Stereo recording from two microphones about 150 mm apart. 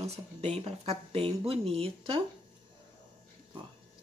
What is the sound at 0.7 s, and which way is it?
Speech, 40° right (ahead or behind).